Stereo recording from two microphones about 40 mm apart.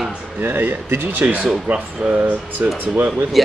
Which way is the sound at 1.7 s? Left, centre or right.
Right.